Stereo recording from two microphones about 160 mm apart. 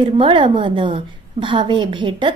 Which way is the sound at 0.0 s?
30° right (ahead or behind).